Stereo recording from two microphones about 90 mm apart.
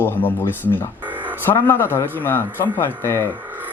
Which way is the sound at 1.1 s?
20° right (ahead or behind).